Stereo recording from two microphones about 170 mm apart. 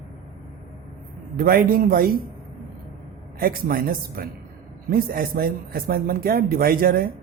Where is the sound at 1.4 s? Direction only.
60° right (ahead or behind).